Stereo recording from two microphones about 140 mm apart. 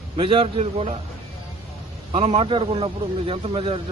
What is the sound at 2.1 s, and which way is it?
Speech, 45° right (ahead or behind).